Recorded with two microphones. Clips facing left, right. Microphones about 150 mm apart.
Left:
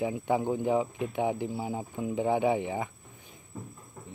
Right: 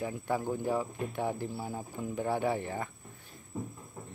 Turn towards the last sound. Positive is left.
turn(degrees=-10)  # may be behind; listen again after turning